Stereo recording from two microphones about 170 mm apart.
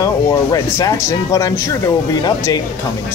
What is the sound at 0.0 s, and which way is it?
Speech, 20° left (ahead or behind).